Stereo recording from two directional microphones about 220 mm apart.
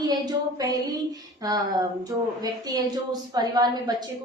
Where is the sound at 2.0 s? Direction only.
15° right (ahead or behind).